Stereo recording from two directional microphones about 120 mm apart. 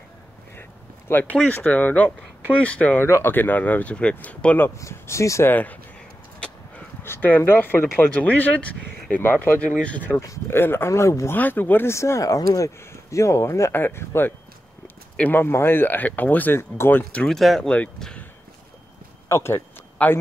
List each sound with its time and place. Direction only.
0.6 s speech: 15° left (ahead or behind)
7.0 s speech: 20° left (ahead or behind)
19.2 s a sound: 20° left (ahead or behind)